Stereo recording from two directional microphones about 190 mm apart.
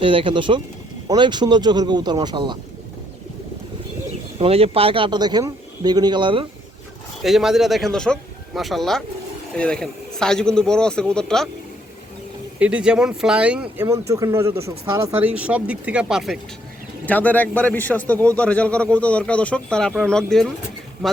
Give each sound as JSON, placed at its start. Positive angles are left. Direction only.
{"t": 0.0, "sound": "a man's voice", "side_deg": -25}
{"t": 4.4, "sound": "a man's voice", "side_deg": -30}
{"t": 7.2, "sound": "speech", "side_deg": 0}
{"t": 12.5, "sound": "speech", "side_deg": -5}
{"t": 14.1, "sound": "speech", "side_deg": -15}
{"t": 17.1, "sound": "a man's voice", "side_deg": 10}